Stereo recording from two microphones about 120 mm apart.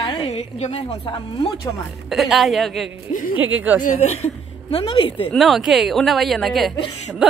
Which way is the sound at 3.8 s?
65° left (ahead or behind).